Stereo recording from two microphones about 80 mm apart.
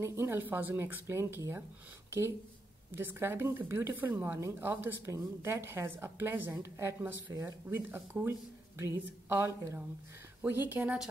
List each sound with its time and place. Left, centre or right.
0.0 s speech: right